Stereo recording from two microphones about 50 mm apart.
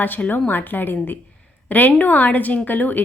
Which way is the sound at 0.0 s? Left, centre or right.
Left.